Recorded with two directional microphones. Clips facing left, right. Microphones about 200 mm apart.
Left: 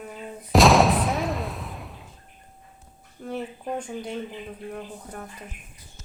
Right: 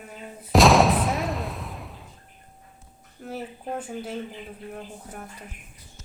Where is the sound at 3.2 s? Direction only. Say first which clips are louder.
Left 2 dB; 5° right (ahead or behind).